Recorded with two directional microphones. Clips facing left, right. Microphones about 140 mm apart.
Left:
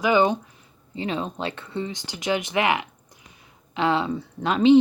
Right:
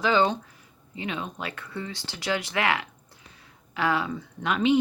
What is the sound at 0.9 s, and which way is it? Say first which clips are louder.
Speech: left 5 dB; 30° left (ahead or behind).